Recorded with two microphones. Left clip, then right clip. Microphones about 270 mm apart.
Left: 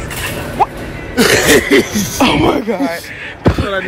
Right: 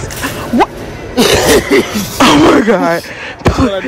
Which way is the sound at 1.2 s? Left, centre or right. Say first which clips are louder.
Right 1 dB; right.